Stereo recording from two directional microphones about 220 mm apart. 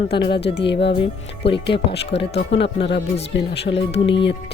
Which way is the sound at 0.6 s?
50° left (ahead or behind).